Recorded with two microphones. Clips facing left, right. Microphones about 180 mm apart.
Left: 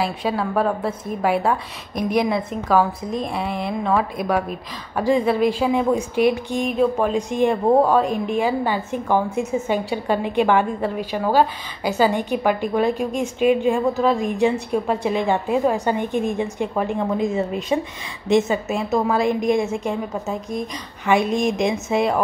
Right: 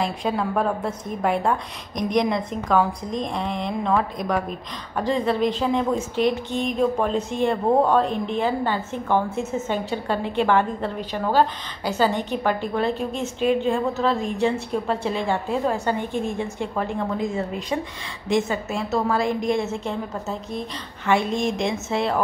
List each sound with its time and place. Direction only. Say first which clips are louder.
0.0 s a woman's voice: left 1 dB; centre (ahead or behind)